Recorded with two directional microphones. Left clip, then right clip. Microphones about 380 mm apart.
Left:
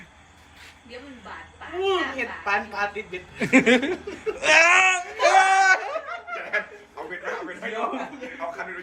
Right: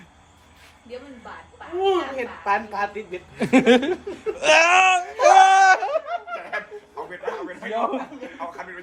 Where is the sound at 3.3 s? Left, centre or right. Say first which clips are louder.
Right 2 dB; centre.